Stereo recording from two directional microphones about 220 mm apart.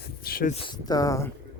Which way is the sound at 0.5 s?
15° left (ahead or behind).